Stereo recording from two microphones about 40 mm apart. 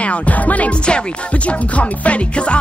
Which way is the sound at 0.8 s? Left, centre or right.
Left.